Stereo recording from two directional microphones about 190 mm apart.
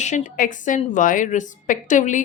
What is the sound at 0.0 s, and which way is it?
A woman's voice, 40° left (ahead or behind).